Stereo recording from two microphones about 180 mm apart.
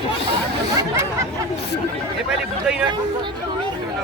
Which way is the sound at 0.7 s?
15° right (ahead or behind).